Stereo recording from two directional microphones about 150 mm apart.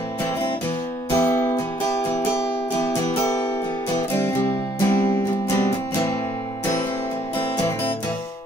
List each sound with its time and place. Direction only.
1.1 s music: 15° left (ahead or behind)
4.1 s music: 15° left (ahead or behind)